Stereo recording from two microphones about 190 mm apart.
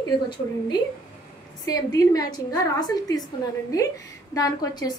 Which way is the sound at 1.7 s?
20° left (ahead or behind).